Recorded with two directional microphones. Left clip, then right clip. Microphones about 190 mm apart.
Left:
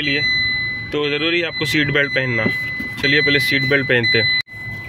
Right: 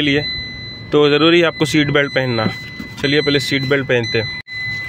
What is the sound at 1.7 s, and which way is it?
Speech, 20° right (ahead or behind).